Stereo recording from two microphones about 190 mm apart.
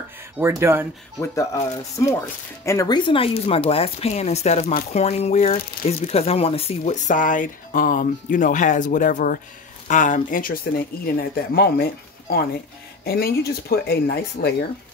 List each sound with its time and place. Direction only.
0.4 s speech: 15° right (ahead or behind)
1.2 s speech: 15° left (ahead or behind); by 14.5 s 55° left (ahead or behind)